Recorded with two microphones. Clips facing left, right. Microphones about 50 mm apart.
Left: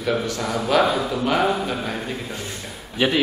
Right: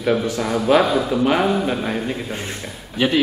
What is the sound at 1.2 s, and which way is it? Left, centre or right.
Speech, centre.